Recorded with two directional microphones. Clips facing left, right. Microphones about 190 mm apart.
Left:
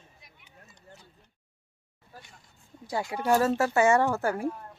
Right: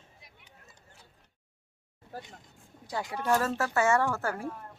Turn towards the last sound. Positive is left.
turn(degrees=15)  # may be behind; listen again after turning